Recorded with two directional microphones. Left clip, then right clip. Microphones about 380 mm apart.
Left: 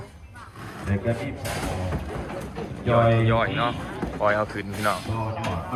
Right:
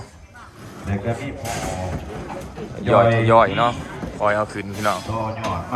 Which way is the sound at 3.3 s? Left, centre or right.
Centre.